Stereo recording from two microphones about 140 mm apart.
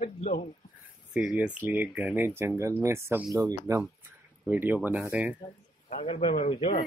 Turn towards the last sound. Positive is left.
turn(degrees=45)  # may be behind; listen again after turning